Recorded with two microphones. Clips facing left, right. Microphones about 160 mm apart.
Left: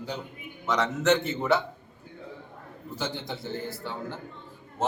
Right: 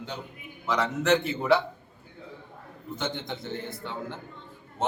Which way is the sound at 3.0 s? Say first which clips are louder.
Even; 5° left (ahead or behind).